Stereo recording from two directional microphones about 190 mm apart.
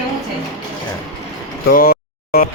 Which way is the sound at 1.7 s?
55° left (ahead or behind).